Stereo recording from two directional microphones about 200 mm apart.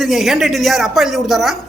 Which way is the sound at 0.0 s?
Centre (ahead or behind).